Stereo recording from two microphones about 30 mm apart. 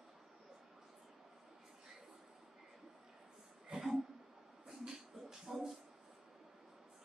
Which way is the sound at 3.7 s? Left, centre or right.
Right.